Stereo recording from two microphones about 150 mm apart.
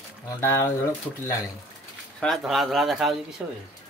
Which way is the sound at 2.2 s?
Centre (ahead or behind).